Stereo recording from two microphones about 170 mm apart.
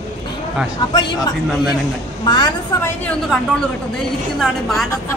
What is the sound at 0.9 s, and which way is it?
Speech, 25° left (ahead or behind).